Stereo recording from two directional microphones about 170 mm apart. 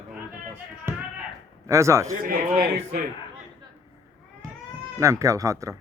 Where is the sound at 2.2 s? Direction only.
60° right (ahead or behind).